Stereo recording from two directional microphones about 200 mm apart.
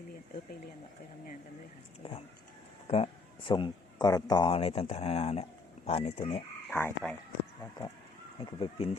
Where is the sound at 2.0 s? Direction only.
30° left (ahead or behind).